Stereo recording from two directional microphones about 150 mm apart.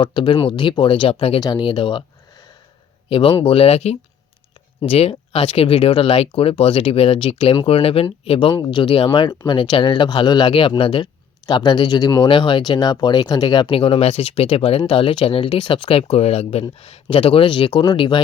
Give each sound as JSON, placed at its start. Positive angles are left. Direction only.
{"t": 0.0, "sound": "speech", "side_deg": 35}
{"t": 3.1, "sound": "speech", "side_deg": 35}